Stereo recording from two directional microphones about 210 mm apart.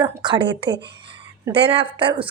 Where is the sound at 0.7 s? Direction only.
55° right (ahead or behind).